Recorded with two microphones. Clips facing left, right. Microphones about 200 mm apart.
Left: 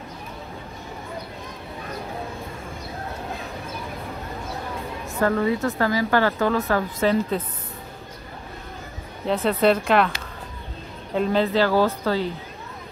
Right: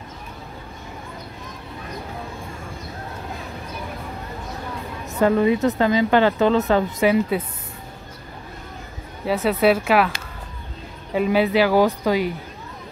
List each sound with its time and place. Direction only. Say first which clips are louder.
5.2 s speech: right 4 dB; 20° right (ahead or behind)
9.2 s speech: right 1 dB; 5° right (ahead or behind)
11.1 s speech: right 2 dB; 10° right (ahead or behind)